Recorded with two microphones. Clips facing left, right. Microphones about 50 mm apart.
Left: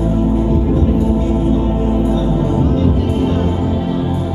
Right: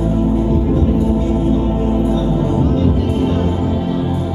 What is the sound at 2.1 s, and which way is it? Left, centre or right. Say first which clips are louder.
Music: even; centre.